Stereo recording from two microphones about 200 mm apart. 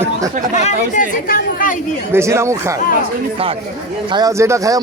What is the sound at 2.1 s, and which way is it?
Speech, 15° right (ahead or behind).